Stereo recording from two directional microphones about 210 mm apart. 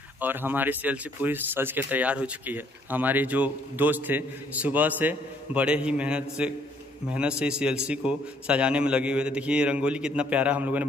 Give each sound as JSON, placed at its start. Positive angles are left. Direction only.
{"t": 0.2, "sound": "a man's voice", "side_deg": -10}